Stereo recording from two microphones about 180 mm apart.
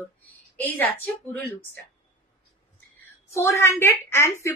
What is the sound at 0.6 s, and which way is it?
A woman's voice, 10° left (ahead or behind).